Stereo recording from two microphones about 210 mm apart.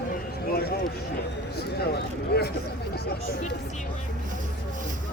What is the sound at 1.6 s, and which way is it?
Speech, 50° left (ahead or behind).